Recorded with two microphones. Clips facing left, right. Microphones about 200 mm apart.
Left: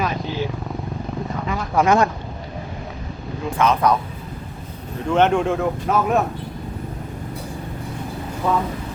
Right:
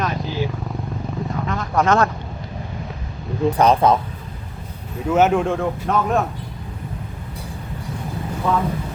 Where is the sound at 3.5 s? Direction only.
35° right (ahead or behind).